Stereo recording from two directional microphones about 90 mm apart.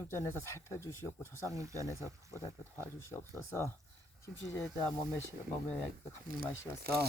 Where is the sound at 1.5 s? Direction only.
35° right (ahead or behind).